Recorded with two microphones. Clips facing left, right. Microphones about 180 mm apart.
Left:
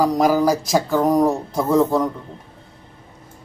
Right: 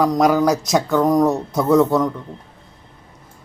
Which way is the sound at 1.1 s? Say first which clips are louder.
Right 1 dB; 30° left (ahead or behind).